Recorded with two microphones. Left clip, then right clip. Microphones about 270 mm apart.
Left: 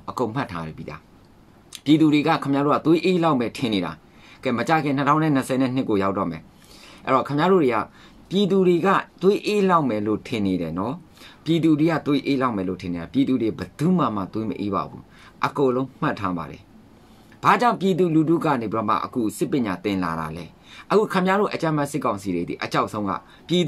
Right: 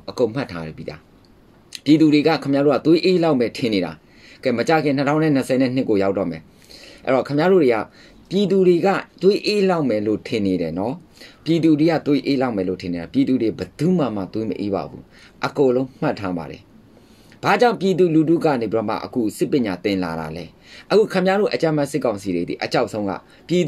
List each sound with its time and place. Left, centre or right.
0.2 s speech: centre
21.0 s speech: left
21.4 s speech: centre